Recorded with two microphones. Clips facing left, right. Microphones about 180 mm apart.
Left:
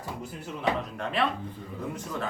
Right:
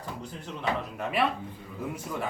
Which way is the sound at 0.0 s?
10° left (ahead or behind).